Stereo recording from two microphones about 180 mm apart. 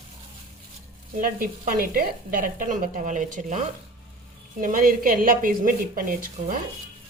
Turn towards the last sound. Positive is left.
turn(degrees=-50)  # may be behind; listen again after turning